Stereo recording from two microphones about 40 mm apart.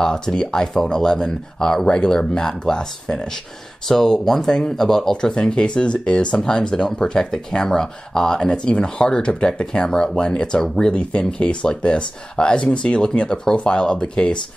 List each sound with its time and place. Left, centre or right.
0.0 s speech: centre
5.1 s speech: left
8.6 s speech: left
11.0 s speech: left